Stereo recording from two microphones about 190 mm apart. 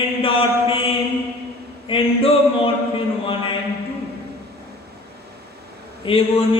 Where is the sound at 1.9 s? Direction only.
30° left (ahead or behind).